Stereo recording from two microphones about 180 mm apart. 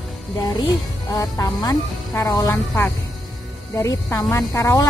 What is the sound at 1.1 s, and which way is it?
Speech, 20° left (ahead or behind).